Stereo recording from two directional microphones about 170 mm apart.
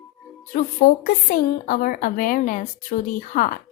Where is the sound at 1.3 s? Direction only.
55° left (ahead or behind).